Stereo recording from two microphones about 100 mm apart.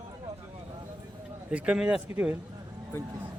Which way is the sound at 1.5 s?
15° right (ahead or behind).